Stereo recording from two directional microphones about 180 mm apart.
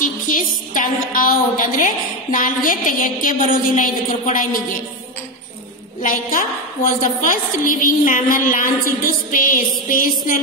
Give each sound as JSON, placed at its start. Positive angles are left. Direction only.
{"t": 0.0, "sound": "a woman's voice", "side_deg": 50}
{"t": 5.9, "sound": "a woman's voice", "side_deg": 50}